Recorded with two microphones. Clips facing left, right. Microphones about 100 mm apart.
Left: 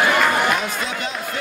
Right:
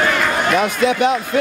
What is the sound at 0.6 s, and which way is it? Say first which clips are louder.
Speech: right 10 dB; 65° right (ahead or behind).